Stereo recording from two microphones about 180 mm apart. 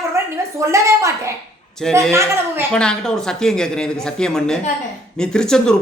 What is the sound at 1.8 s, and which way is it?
Speech, centre (ahead or behind).